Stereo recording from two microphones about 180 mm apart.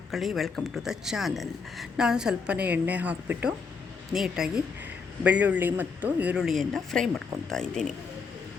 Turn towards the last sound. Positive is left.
turn(degrees=5)  # may be behind; listen again after turning